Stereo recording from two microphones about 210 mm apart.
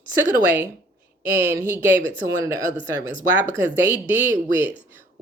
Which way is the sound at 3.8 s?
10° right (ahead or behind).